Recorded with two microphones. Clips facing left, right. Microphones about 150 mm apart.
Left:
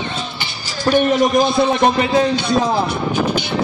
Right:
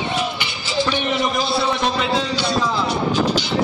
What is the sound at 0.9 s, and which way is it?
A man's voice, 45° left (ahead or behind).